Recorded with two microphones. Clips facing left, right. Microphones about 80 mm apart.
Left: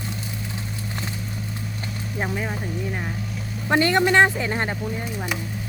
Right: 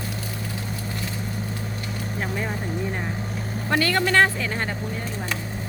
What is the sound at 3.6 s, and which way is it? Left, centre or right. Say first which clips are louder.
A man's voice: left 4 dB; left.